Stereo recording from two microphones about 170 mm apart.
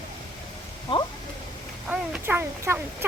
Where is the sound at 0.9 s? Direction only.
30° left (ahead or behind).